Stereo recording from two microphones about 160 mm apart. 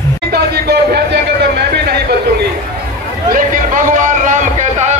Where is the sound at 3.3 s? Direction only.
55° right (ahead or behind).